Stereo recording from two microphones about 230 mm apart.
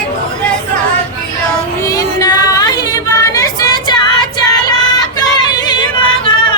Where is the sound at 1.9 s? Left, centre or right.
Centre.